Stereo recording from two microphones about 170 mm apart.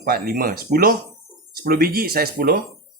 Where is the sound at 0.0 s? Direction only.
60° right (ahead or behind).